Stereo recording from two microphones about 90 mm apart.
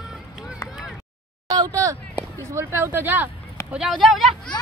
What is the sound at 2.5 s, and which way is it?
Speech, 30° right (ahead or behind).